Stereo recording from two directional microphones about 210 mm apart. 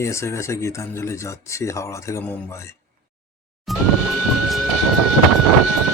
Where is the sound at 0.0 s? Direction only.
15° left (ahead or behind).